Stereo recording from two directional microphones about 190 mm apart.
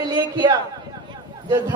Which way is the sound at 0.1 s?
25° right (ahead or behind).